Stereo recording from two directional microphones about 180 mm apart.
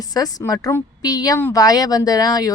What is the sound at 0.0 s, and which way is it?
Speech, 20° left (ahead or behind).